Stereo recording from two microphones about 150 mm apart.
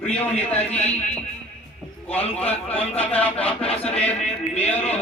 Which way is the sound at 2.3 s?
10° left (ahead or behind).